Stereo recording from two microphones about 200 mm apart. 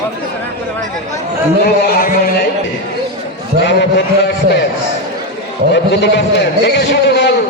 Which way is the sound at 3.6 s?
60° left (ahead or behind).